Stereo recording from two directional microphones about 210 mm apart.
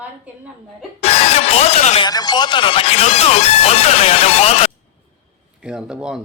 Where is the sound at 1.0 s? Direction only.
30° left (ahead or behind).